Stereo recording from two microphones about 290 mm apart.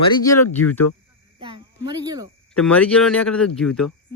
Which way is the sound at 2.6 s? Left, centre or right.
Centre.